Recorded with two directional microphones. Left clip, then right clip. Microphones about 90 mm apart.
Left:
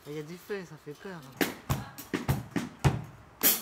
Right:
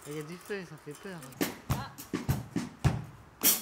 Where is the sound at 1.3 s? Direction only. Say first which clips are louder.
Left 3 dB; 20° left (ahead or behind).